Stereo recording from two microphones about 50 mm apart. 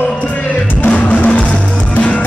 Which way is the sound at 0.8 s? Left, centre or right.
Left.